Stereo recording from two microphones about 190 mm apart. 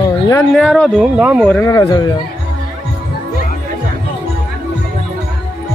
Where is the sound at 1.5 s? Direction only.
15° left (ahead or behind).